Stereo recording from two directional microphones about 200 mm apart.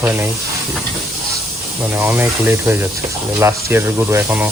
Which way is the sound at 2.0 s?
10° right (ahead or behind).